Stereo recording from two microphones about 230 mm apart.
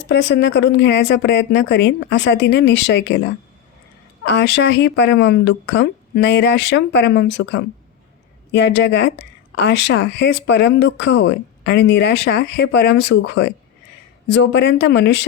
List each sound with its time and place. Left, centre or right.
0.1 s speech: left
4.2 s speech: left